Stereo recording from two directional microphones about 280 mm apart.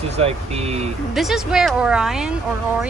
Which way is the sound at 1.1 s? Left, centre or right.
Centre.